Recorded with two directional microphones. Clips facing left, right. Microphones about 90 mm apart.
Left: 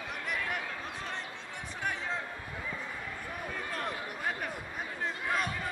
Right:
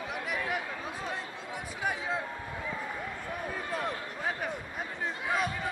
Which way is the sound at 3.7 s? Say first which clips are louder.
Right 3 dB; 5° right (ahead or behind).